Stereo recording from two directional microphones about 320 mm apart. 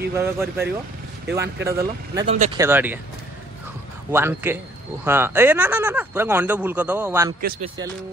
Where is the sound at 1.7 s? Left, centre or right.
Centre.